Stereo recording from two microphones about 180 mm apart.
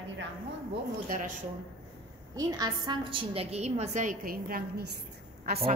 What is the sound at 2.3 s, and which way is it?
A woman's voice, 20° right (ahead or behind).